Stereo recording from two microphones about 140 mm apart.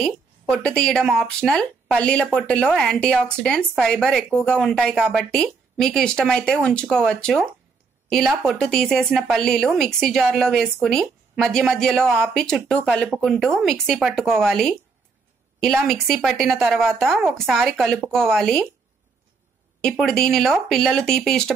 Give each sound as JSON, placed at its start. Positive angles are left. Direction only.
{"t": 0.0, "sound": "speech", "side_deg": 5}
{"t": 19.8, "sound": "speech", "side_deg": 5}